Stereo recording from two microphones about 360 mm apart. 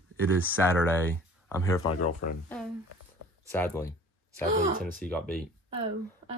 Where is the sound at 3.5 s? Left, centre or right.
Centre.